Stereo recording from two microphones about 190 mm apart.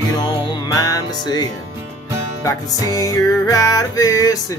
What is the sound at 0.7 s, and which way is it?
Music, 20° left (ahead or behind).